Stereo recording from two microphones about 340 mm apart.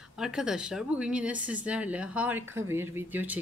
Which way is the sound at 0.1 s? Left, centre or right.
Centre.